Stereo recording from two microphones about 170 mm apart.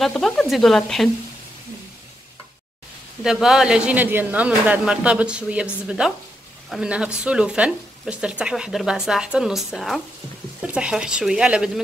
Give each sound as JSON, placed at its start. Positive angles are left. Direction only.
{"t": 0.0, "sound": "speech", "side_deg": 0}
{"t": 3.3, "sound": "speech", "side_deg": -5}